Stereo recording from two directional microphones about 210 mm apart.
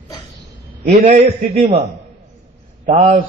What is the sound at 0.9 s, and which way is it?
Speech, 35° right (ahead or behind).